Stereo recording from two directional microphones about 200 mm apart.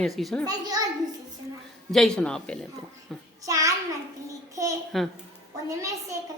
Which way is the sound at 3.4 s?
15° right (ahead or behind).